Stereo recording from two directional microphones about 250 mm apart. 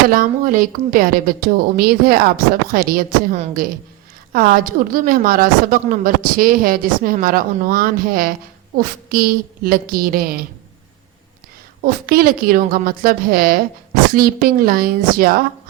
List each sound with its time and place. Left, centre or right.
0.1 s a woman's voice: right
11.8 s a woman's voice: right